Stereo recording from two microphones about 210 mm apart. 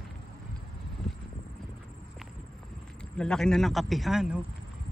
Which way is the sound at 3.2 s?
5° left (ahead or behind).